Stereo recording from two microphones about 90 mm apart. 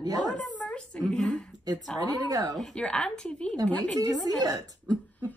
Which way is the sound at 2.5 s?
5° left (ahead or behind).